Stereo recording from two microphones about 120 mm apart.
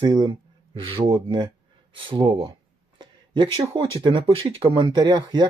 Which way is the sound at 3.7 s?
45° right (ahead or behind).